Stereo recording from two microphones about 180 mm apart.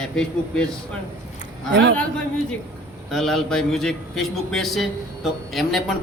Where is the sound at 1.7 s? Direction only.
70° right (ahead or behind).